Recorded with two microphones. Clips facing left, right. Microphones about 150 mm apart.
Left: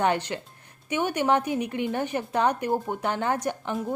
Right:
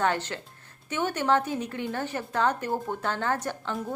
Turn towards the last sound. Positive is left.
turn(degrees=15)  # may be behind; listen again after turning